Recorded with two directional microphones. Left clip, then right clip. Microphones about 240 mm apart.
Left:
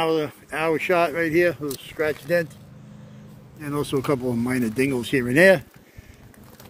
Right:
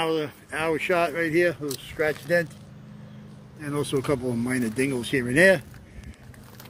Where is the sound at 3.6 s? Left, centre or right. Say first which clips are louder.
Left 2 dB; centre.